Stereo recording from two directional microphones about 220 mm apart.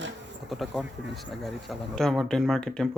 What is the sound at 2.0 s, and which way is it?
Speech, centre (ahead or behind).